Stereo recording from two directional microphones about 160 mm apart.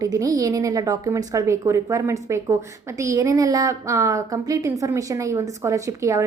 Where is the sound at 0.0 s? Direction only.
20° right (ahead or behind).